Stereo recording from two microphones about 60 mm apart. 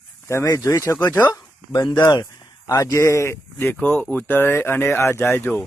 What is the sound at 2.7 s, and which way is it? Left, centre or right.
Speech, left.